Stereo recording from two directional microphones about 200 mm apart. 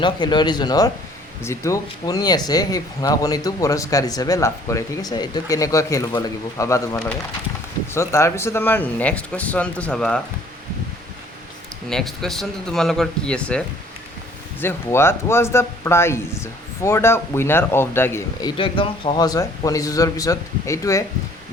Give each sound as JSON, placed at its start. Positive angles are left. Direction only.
{"t": 0.0, "sound": "speech", "side_deg": 20}
{"t": 11.9, "sound": "speech", "side_deg": 0}